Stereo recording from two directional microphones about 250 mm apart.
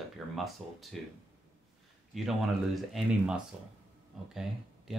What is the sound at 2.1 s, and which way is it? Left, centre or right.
Speech, centre.